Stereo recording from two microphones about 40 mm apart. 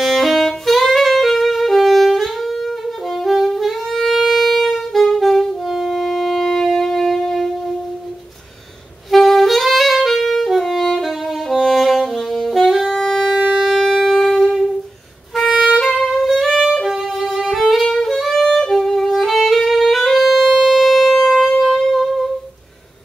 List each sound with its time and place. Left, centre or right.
0.0 s saxophone: centre
5.9 s wind instrument: centre
9.1 s saxophone: centre
13.7 s wind instrument: centre
15.5 s music: centre
15.8 s music: centre
16.9 s violin: centre
17.8 s music: centre
21.5 s wind instrument: centre